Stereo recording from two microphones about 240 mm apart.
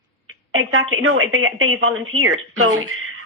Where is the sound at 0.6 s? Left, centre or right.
Right.